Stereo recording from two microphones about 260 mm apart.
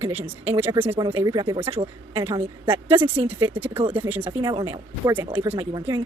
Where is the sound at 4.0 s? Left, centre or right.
Centre.